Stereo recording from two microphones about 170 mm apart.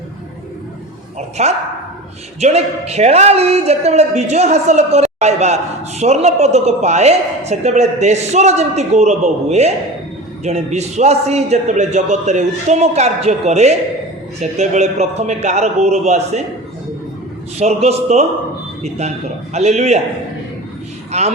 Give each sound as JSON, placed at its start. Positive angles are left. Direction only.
{"t": 1.4, "sound": "a woman's voice", "side_deg": -40}
{"t": 17.6, "sound": "a woman's voice", "side_deg": -40}
{"t": 21.1, "sound": "a man's voice", "side_deg": -40}